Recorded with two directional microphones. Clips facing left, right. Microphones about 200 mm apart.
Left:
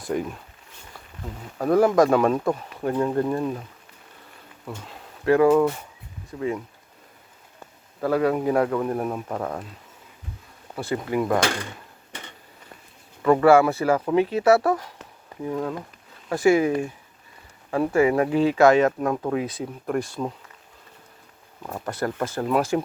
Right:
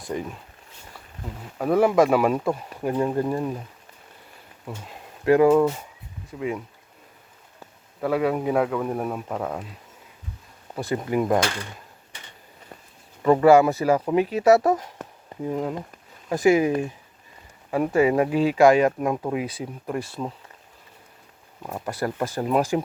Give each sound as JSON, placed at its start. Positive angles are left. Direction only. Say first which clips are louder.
{"t": 0.0, "sound": "speech", "louder": "left 3 dB", "side_deg": 0}
{"t": 1.5, "sound": "speech", "louder": "left 1 dB", "side_deg": -5}
{"t": 4.6, "sound": "speech", "louder": "even", "side_deg": -15}
{"t": 8.0, "sound": "speech", "louder": "left 1 dB", "side_deg": -5}
{"t": 10.8, "sound": "speech", "louder": "right 1 dB", "side_deg": -20}
{"t": 13.2, "sound": "speech", "louder": "right 1 dB", "side_deg": -20}
{"t": 21.6, "sound": "speech", "louder": "even", "side_deg": -10}